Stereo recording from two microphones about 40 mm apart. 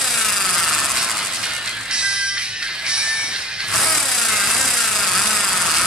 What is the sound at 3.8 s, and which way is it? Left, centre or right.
Insect, centre.